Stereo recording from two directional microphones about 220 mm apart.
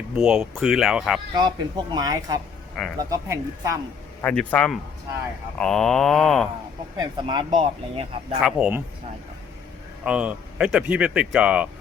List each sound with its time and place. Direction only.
0.2 s speech: centre (ahead or behind)
1.4 s speech: 20° right (ahead or behind)
2.8 s speech: 5° left (ahead or behind)
3.1 s speech: 15° right (ahead or behind)
4.2 s speech: 5° left (ahead or behind)
6.9 s speech: 20° right (ahead or behind)
8.4 s speech: 5° right (ahead or behind)
10.0 s speech: 5° right (ahead or behind)